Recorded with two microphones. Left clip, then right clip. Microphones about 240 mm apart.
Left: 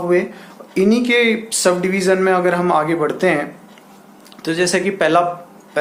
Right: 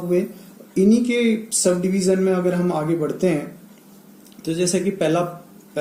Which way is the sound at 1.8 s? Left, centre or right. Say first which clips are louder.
Left 4 dB; left.